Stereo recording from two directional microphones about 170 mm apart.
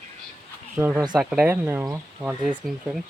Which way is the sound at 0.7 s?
10° right (ahead or behind).